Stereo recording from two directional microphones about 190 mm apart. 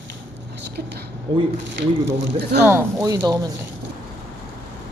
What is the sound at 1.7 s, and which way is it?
Speech, 70° right (ahead or behind).